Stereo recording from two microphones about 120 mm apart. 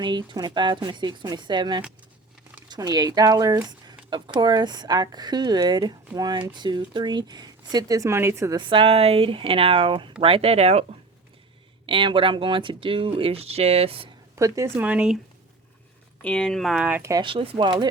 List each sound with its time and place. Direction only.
0.0 s speech: 40° right (ahead or behind); by 8.5 s 25° right (ahead or behind)
8.5 s speech: 45° right (ahead or behind); by 10.8 s 60° right (ahead or behind)
11.9 s speech: 45° right (ahead or behind)
14.3 s speech: 25° right (ahead or behind)
14.8 s speech: 10° right (ahead or behind)
16.2 s speech: 5° left (ahead or behind); by 17.0 s 10° right (ahead or behind)
17.0 s speech: 25° right (ahead or behind)
17.2 s speech: 45° right (ahead or behind)